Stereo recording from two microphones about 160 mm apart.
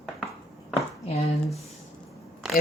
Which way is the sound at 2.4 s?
5° right (ahead or behind).